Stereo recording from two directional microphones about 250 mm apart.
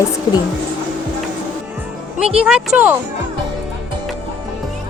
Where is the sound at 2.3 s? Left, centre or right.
Centre.